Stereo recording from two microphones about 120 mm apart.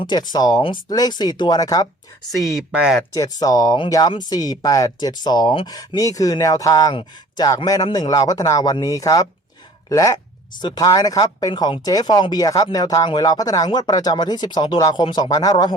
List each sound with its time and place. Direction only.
0.0 s speech: 35° left (ahead or behind)
2.4 s speech: centre (ahead or behind)
3.2 s speech: 30° left (ahead or behind)